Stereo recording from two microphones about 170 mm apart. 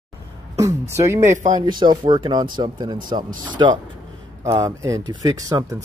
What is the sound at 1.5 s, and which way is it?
Speech, 25° right (ahead or behind).